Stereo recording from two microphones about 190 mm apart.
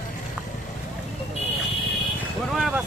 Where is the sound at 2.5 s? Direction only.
Centre (ahead or behind).